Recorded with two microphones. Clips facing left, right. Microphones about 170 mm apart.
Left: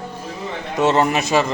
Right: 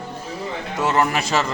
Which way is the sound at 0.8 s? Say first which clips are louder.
Left 4 dB; 25° left (ahead or behind).